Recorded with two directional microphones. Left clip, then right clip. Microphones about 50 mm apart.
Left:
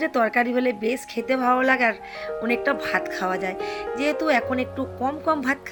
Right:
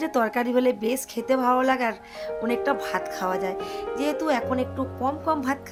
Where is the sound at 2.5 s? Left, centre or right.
Centre.